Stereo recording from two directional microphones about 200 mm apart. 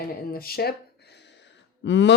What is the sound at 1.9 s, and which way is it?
Speech, 65° left (ahead or behind).